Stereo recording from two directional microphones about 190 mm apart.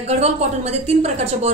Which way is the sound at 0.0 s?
35° right (ahead or behind).